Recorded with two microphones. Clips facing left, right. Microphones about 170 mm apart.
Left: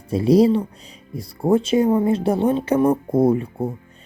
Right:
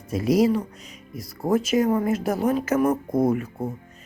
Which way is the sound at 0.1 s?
30° left (ahead or behind).